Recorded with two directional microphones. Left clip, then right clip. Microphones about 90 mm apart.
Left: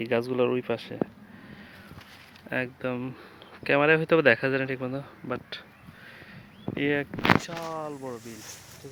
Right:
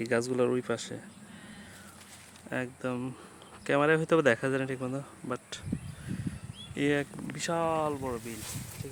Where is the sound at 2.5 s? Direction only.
5° left (ahead or behind).